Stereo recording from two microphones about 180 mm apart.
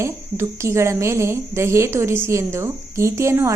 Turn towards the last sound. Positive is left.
turn(degrees=-15)  # may be behind; listen again after turning